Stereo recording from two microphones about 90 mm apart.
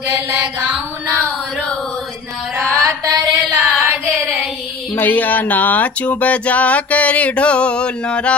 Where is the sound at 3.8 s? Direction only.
20° right (ahead or behind).